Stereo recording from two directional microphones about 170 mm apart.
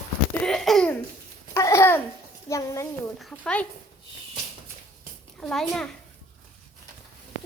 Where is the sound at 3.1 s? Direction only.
5° left (ahead or behind).